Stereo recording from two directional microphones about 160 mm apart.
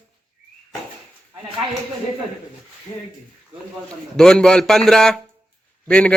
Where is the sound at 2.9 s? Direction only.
25° left (ahead or behind).